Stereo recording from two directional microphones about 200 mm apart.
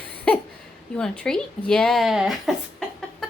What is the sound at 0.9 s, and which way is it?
Speech, 5° left (ahead or behind).